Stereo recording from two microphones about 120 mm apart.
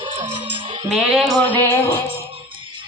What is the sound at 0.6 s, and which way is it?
Music, 50° right (ahead or behind).